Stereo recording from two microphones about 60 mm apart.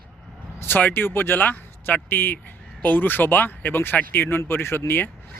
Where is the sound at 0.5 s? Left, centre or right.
Left.